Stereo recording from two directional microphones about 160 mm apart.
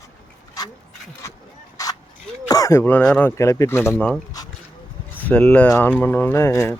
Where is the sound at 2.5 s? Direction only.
20° left (ahead or behind).